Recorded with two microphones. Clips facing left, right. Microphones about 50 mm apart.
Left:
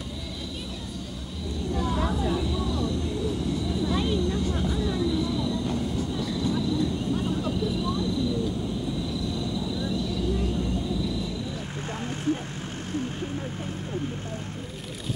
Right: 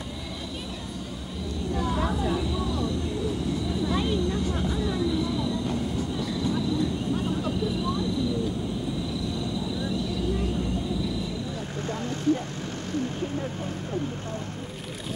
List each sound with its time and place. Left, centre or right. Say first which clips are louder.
1.8 s vehicle: even; centre
11.9 s vehicle: right 3 dB; left